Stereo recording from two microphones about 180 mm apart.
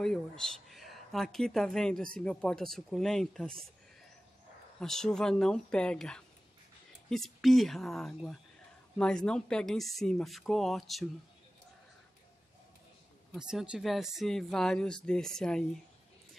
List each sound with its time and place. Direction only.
0.0 s speech: 5° left (ahead or behind)
4.7 s speech: 5° left (ahead or behind)
13.3 s speech: 5° right (ahead or behind)